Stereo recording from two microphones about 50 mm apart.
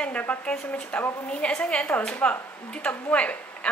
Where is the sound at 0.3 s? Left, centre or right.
Centre.